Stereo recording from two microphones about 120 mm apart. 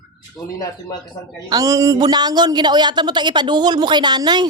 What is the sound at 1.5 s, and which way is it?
Speech, 30° right (ahead or behind).